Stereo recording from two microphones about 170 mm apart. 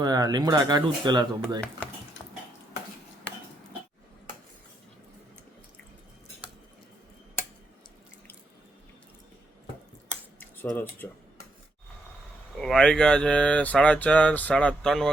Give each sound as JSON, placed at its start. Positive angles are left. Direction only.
{"t": 0.0, "sound": "speech", "side_deg": -25}
{"t": 10.4, "sound": "cutlery", "side_deg": 10}
{"t": 12.5, "sound": "speech", "side_deg": 5}